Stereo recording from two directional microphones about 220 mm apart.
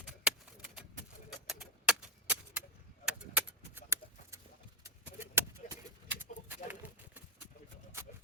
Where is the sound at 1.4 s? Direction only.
5° right (ahead or behind).